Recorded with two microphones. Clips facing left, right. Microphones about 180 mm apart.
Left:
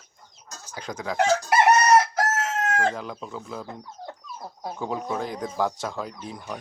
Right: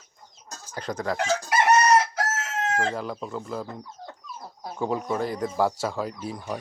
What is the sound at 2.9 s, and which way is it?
Speech, centre (ahead or behind).